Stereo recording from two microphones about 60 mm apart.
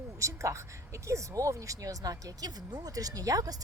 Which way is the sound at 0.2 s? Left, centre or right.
Right.